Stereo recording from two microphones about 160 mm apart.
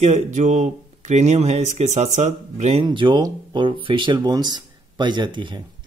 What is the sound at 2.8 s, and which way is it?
Speech, 30° right (ahead or behind).